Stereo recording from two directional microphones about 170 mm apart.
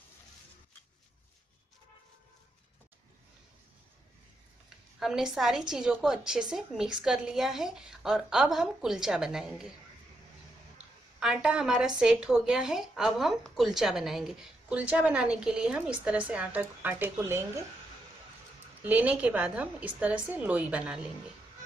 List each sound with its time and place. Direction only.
4.9 s speech: centre (ahead or behind)
11.1 s a woman's voice: 5° right (ahead or behind)
18.8 s a woman's voice: 10° right (ahead or behind)